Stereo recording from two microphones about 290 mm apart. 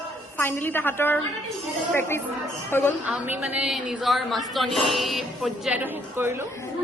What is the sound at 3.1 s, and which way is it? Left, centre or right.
A woman's voice, centre.